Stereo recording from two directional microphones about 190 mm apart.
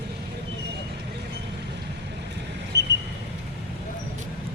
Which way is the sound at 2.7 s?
65° right (ahead or behind).